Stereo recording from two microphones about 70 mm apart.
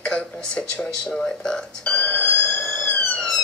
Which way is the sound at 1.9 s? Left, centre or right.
Centre.